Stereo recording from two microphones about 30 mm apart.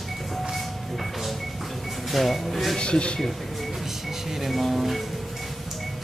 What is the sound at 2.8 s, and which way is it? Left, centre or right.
Speech, left.